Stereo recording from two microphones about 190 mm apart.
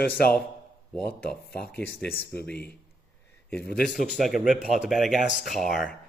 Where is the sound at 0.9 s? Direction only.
5° left (ahead or behind).